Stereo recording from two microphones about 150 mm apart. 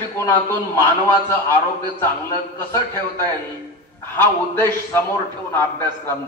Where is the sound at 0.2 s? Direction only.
15° left (ahead or behind).